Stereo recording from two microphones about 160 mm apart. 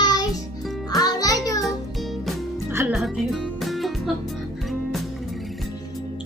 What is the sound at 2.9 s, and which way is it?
Music, centre (ahead or behind).